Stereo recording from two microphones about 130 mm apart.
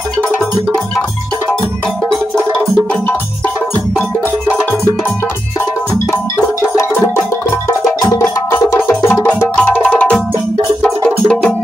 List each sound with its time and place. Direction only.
6.6 s music: 15° left (ahead or behind)